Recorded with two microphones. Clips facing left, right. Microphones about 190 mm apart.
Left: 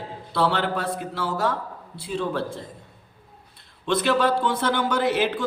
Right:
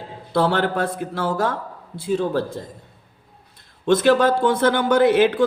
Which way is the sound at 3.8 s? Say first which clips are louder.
Right 6 dB; 45° right (ahead or behind).